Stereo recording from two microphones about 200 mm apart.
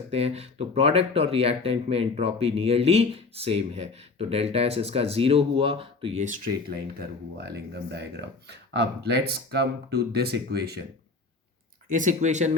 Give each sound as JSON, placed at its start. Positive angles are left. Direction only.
{"t": 0.1, "sound": "speech", "side_deg": -30}
{"t": 7.3, "sound": "speech", "side_deg": -55}
{"t": 11.9, "sound": "speech", "side_deg": -40}